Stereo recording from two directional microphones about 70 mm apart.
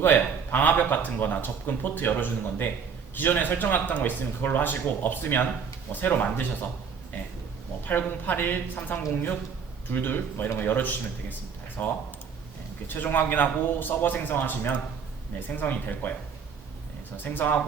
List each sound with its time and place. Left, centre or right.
0.0 s a man's voice: left
7.9 s a man's voice: left
17.2 s a man's voice: left